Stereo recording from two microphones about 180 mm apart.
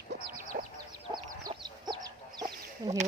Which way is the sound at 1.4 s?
25° right (ahead or behind).